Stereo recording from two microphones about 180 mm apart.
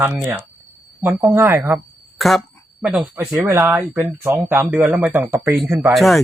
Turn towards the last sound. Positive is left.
turn(degrees=0)  # may be behind; listen again after turning